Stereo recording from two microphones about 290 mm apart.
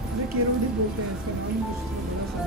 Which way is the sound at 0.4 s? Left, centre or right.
Right.